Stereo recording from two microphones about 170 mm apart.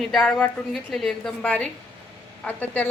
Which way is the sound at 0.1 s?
5° left (ahead or behind).